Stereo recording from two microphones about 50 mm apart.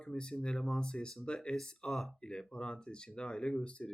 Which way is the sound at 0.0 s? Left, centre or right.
Centre.